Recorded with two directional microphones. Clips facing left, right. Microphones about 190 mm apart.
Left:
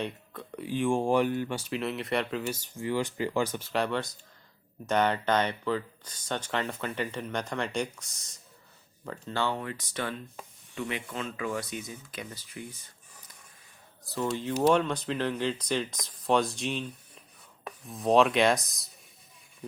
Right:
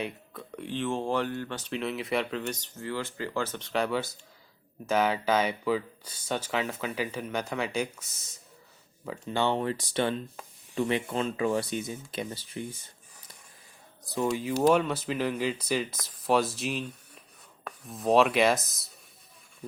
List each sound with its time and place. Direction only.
0.0 s speech: centre (ahead or behind)
3.7 s speech: centre (ahead or behind); by 12.7 s 25° right (ahead or behind)
14.0 s speech: 15° right (ahead or behind)
17.8 s speech: centre (ahead or behind)